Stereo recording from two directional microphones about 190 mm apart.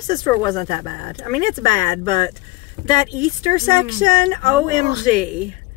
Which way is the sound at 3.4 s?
45° right (ahead or behind).